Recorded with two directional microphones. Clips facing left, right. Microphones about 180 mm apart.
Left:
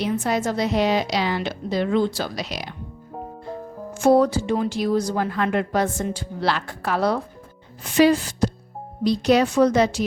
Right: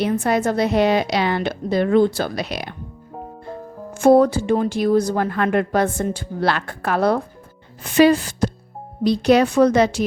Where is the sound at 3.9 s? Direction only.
55° right (ahead or behind).